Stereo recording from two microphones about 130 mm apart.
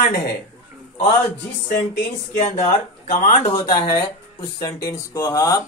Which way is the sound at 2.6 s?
70° left (ahead or behind).